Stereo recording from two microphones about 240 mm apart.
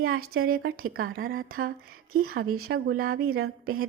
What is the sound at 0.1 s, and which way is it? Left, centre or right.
Speech, right.